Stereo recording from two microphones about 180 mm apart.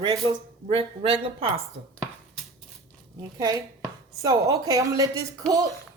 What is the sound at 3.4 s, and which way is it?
A man's voice, 20° right (ahead or behind).